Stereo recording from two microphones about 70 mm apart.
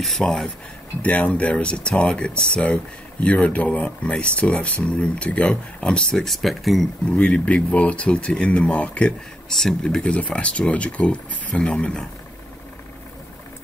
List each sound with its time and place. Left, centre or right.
0.0 s speech: centre
1.0 s speech: left; by 6.9 s centre
7.2 s speech: centre
9.5 s speech: centre